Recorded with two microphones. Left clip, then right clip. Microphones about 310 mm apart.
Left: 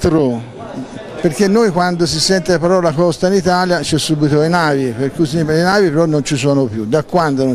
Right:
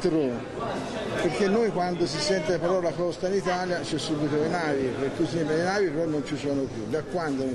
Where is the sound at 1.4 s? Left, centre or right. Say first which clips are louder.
Left 13 dB; left.